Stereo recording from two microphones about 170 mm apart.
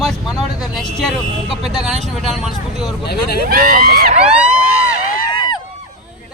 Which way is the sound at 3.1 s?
65° left (ahead or behind).